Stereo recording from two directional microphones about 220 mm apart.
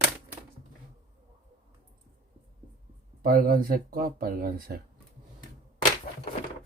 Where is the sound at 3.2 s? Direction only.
40° right (ahead or behind).